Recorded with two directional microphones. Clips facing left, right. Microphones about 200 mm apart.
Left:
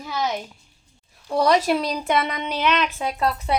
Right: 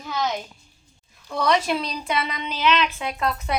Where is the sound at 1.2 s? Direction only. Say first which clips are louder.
Left 3 dB; 35° left (ahead or behind).